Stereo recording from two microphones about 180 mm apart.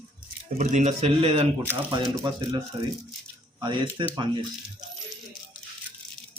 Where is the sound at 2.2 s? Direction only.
25° right (ahead or behind).